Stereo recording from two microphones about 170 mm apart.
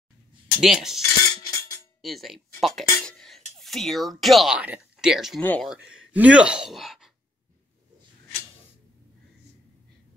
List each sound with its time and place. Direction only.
0.6 s speech: centre (ahead or behind)
1.3 s music: 25° left (ahead or behind)
2.0 s speech: centre (ahead or behind)
5.4 s speech: 10° left (ahead or behind)
5.7 s speech: 5° right (ahead or behind)